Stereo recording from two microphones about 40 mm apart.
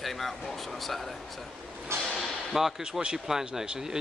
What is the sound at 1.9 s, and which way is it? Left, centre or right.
Speech, right.